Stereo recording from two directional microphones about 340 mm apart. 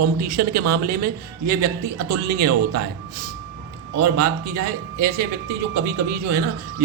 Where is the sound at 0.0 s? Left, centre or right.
Right.